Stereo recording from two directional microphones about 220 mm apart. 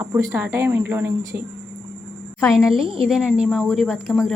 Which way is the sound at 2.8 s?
25° right (ahead or behind).